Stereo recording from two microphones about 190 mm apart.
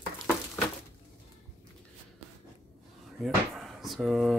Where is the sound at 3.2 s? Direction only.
Centre (ahead or behind).